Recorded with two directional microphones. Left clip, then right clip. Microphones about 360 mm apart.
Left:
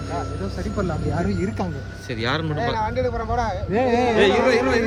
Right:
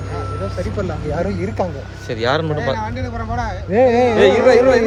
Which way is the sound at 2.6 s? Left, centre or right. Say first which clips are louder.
Right 1 dB; left.